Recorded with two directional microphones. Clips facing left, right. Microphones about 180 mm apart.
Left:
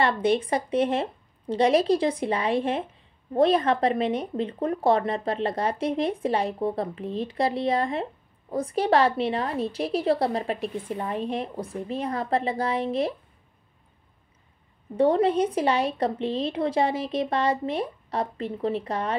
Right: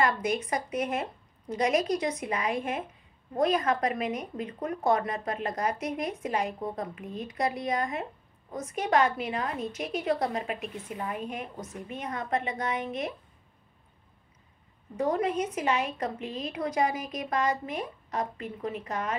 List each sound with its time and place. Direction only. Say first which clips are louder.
0.0 s speech: left 5 dB; 30° left (ahead or behind)
15.0 s speech: left 7 dB; 30° left (ahead or behind)